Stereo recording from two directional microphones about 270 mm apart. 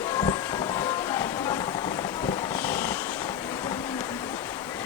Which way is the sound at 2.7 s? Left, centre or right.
Centre.